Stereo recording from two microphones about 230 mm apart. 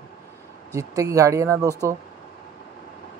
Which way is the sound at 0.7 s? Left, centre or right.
Centre.